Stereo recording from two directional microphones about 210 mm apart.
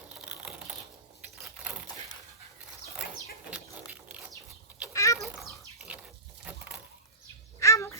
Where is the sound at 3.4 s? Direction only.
5° right (ahead or behind).